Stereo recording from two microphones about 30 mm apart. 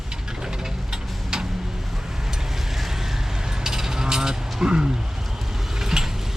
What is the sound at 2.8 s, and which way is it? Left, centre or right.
Boat, centre.